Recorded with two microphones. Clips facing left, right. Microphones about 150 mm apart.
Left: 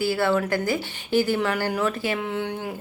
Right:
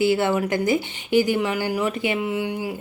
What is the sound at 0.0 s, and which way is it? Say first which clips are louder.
Speech: right 2 dB; 20° right (ahead or behind).